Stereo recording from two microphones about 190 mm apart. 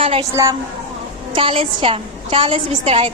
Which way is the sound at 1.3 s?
30° right (ahead or behind).